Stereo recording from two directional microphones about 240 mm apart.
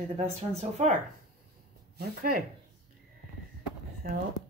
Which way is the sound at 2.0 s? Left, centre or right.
Right.